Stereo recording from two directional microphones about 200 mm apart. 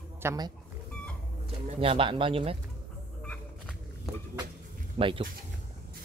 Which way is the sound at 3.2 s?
5° left (ahead or behind).